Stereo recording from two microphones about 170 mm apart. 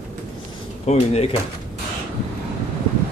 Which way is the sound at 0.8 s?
40° left (ahead or behind).